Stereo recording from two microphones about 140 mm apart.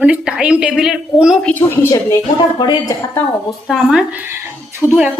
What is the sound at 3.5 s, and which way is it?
A woman's voice, centre (ahead or behind).